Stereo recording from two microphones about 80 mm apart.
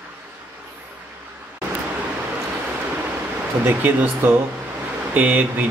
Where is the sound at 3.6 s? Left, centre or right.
Right.